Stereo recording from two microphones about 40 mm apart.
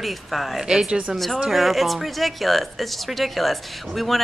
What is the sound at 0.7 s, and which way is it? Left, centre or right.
Speech, centre.